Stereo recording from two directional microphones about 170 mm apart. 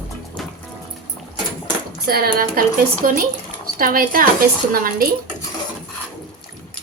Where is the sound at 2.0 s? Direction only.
65° right (ahead or behind).